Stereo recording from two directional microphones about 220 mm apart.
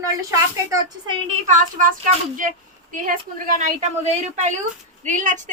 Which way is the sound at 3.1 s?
35° right (ahead or behind).